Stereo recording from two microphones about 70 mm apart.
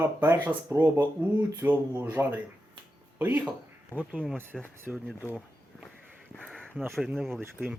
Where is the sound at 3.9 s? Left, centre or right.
Left.